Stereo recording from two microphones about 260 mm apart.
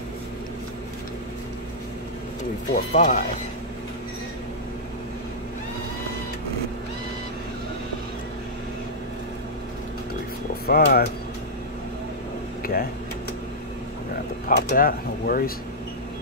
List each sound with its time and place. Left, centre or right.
2.7 s speech: left
10.7 s speech: left
14.5 s speech: left